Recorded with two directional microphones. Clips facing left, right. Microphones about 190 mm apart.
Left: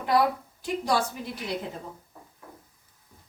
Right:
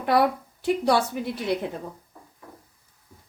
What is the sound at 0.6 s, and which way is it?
Speech, 65° right (ahead or behind).